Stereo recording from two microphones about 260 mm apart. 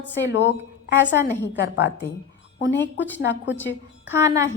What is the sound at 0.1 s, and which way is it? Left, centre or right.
A woman's voice, left.